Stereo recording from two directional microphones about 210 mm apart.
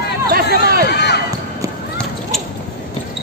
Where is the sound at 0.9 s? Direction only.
50° left (ahead or behind).